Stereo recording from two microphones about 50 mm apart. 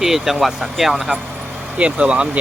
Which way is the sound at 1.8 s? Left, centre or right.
Right.